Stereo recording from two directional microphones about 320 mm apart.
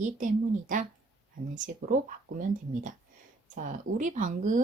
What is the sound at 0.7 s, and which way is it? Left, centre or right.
Speech, right.